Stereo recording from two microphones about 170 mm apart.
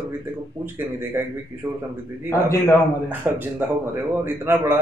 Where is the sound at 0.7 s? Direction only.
15° right (ahead or behind).